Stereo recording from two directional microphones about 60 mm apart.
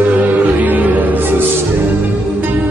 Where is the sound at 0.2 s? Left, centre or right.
Right.